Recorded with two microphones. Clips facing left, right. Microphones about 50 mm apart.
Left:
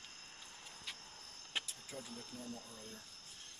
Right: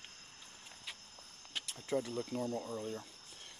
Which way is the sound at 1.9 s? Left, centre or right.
Right.